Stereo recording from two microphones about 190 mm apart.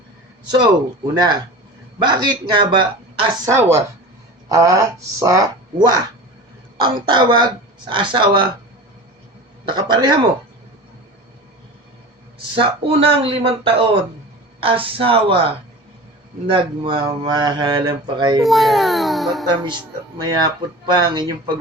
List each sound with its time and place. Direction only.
1.1 s speech: 20° right (ahead or behind)
3.5 s speech: 15° right (ahead or behind)
9.6 s speech: 25° right (ahead or behind)
12.5 s speech: 30° right (ahead or behind)
18.4 s a child's voice: centre (ahead or behind)
19.5 s speech: 25° right (ahead or behind)